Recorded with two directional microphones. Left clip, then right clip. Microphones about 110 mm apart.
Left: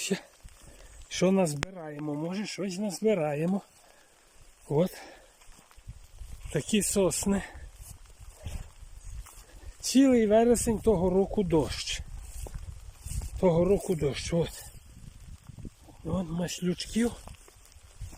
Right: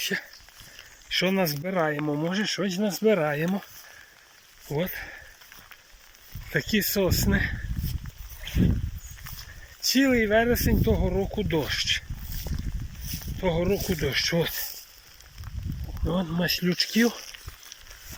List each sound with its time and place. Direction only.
0.0 s speech: 35° left (ahead or behind)
1.0 s a sound: 60° left (ahead or behind)
1.5 s speech: 10° left (ahead or behind)
4.7 s speech: 50° left (ahead or behind)
6.5 s speech: 35° left (ahead or behind)
9.8 s speech: 45° left (ahead or behind)
12.5 s boat: 10° left (ahead or behind)
13.4 s speech: 45° left (ahead or behind)
16.0 s speech: 5° left (ahead or behind)
16.4 s speech: 20° left (ahead or behind)